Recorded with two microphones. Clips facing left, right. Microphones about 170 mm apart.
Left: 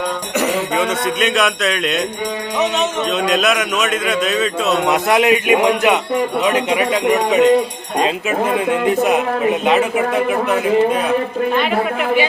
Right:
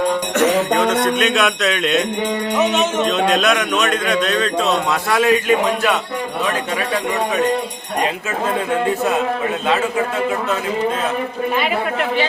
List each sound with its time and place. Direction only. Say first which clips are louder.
0.3 s a man's voice: right 1 dB; centre (ahead or behind)
4.9 s a man's voice: left 5 dB; 20° left (ahead or behind)
8.5 s a man's voice: left 2 dB; 15° left (ahead or behind)
11.5 s a man's voice: left 1 dB; 5° right (ahead or behind)